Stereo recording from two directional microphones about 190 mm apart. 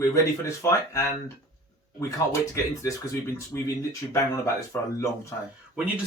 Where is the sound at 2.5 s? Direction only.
15° left (ahead or behind).